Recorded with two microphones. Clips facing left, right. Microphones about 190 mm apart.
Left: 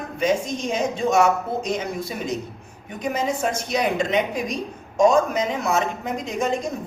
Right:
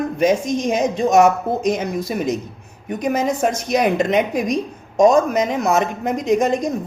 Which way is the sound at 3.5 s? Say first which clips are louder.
Right 5 dB; 45° right (ahead or behind).